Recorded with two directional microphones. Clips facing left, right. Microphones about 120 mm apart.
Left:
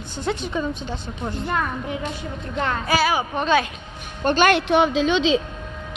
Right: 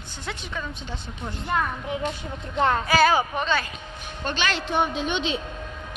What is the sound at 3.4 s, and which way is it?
Speech, 65° left (ahead or behind).